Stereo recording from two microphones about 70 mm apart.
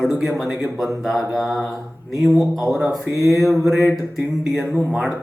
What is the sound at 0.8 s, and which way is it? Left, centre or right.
Speech, centre.